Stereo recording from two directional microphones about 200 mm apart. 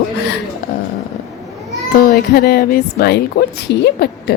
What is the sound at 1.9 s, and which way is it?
A woman's voice, 50° left (ahead or behind).